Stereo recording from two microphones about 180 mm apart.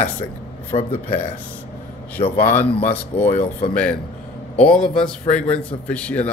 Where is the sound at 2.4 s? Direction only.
10° left (ahead or behind).